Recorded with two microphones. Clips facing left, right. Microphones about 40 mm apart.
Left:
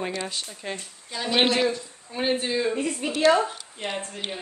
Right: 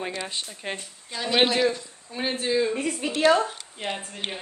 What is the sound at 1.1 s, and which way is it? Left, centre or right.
Speech, centre.